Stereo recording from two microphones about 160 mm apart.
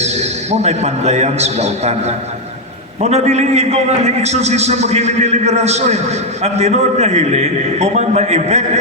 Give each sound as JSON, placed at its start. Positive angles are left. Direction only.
{"t": 0.0, "sound": "a man's voice", "side_deg": -45}